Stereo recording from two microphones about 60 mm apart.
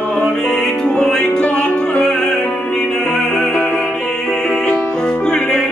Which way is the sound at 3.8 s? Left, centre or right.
Centre.